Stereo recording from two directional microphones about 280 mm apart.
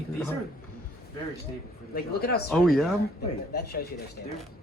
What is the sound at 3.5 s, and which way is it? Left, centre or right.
Speech, left.